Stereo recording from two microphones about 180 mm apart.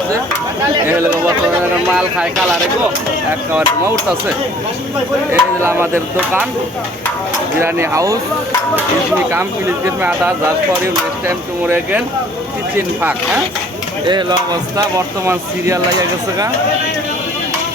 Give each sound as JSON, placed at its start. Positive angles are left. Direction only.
{"t": 2.0, "sound": "speech", "side_deg": -5}
{"t": 5.3, "sound": "speech", "side_deg": -15}
{"t": 7.6, "sound": "speech", "side_deg": -15}
{"t": 10.0, "sound": "speech", "side_deg": -10}
{"t": 14.1, "sound": "speech", "side_deg": -25}